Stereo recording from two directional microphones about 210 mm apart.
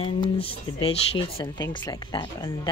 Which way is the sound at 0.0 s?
25° left (ahead or behind).